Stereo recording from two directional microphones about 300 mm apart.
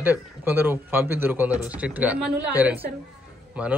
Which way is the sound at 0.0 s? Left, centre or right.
Centre.